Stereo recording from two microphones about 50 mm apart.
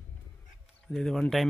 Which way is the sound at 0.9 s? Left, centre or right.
Centre.